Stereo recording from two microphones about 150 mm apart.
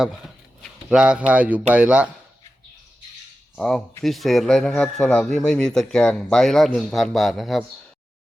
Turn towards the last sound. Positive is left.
turn(degrees=0)  # may be behind; listen again after turning